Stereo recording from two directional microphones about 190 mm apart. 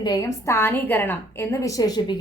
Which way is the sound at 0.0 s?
20° left (ahead or behind).